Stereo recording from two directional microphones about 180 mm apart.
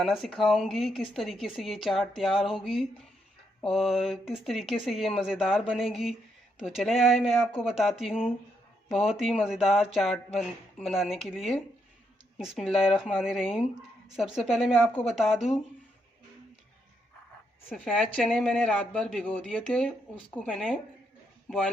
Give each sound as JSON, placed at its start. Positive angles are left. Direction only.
{"t": 0.0, "sound": "speech", "side_deg": 0}
{"t": 17.7, "sound": "speech", "side_deg": 0}